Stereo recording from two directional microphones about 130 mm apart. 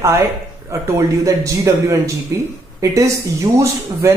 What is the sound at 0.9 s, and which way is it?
Speech, 25° right (ahead or behind).